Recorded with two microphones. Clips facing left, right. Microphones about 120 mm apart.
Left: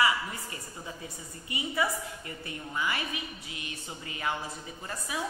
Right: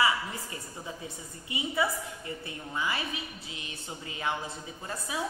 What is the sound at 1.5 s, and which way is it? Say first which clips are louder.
A woman's voice: right 1 dB; 20° right (ahead or behind).